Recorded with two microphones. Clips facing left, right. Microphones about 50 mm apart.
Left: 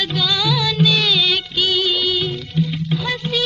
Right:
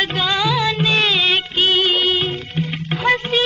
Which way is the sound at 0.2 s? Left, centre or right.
Right.